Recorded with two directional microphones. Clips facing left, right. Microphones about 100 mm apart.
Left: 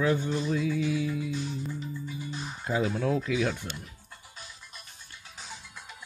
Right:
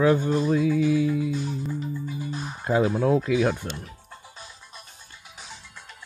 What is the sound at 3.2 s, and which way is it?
Speech, 45° right (ahead or behind).